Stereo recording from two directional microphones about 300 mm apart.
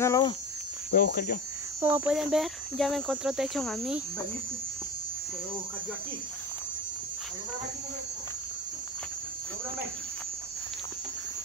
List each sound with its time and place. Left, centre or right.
0.0 s a sound: centre
0.9 s speech: left
1.8 s speech: centre